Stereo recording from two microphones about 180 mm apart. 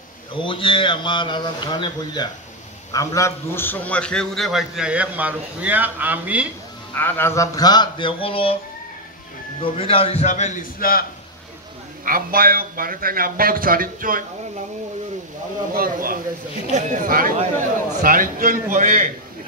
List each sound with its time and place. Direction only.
0.3 s a man's voice: 30° left (ahead or behind); by 6.4 s 10° right (ahead or behind)
7.0 s a man's voice: 10° left (ahead or behind); by 8.5 s 30° left (ahead or behind)
9.6 s speech: 30° left (ahead or behind); by 11.1 s 55° left (ahead or behind)
12.0 s a man's voice: 50° right (ahead or behind)
15.7 s a man's voice: 50° right (ahead or behind)